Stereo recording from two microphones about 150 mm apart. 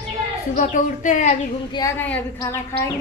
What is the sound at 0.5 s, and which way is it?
Speech, 55° left (ahead or behind).